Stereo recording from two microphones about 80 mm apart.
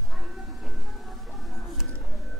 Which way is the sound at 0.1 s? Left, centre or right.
Centre.